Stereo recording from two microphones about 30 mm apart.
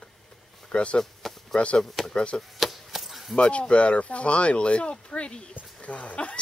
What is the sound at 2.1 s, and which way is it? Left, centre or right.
Speech, left.